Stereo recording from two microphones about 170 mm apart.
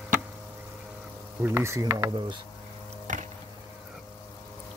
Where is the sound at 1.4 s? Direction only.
15° right (ahead or behind).